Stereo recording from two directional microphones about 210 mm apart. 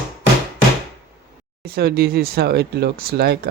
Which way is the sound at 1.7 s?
45° right (ahead or behind).